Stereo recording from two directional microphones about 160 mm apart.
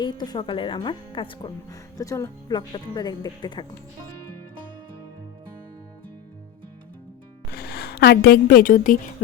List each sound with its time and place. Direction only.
0.0 s speech: 25° left (ahead or behind)
7.5 s a woman's voice: 80° left; by 9.0 s 55° left (ahead or behind)